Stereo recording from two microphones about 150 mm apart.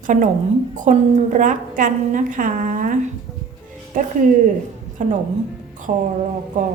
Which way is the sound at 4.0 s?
65° right (ahead or behind).